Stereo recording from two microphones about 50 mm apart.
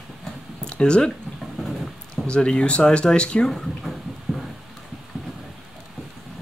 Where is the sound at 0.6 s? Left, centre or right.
Centre.